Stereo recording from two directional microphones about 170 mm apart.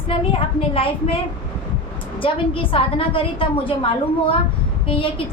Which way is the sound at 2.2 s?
30° left (ahead or behind).